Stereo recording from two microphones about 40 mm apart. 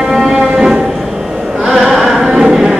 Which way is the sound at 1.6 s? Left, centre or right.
Centre.